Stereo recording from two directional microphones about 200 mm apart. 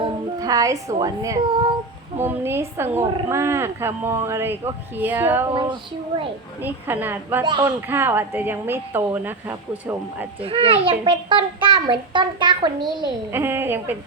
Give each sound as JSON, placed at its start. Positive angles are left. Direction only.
{"t": 0.0, "sound": "speech", "side_deg": -15}
{"t": 6.6, "sound": "speech", "side_deg": -10}
{"t": 7.4, "sound": "a child's voice", "side_deg": -20}
{"t": 7.9, "sound": "speech", "side_deg": -10}
{"t": 10.4, "sound": "a child's voice", "side_deg": -30}